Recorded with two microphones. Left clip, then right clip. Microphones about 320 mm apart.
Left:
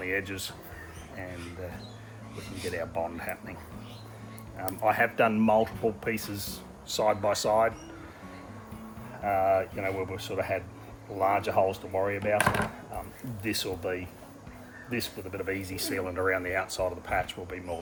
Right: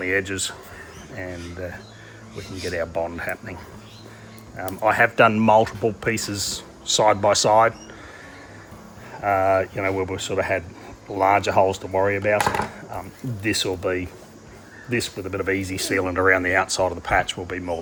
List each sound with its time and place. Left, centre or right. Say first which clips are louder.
0.0 s speech: right 9 dB; right
2.7 s speech: right 8 dB; right
4.5 s speech: right 7 dB; right
9.2 s speech: right 6 dB; right
13.4 s speech: right 9 dB; right
14.8 s speech: right 9 dB; right